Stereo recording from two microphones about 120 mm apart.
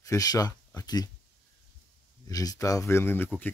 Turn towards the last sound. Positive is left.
turn(degrees=20)  # may be behind; listen again after turning